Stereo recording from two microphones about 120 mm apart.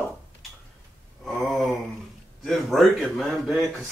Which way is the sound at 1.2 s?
Centre (ahead or behind).